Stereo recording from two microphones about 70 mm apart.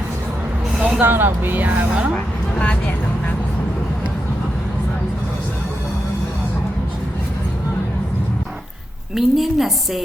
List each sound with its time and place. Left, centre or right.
0.8 s a sound: centre
1.0 s speech: right
1.9 s speech: centre
2.1 s vehicle: centre
9.1 s a woman's voice: centre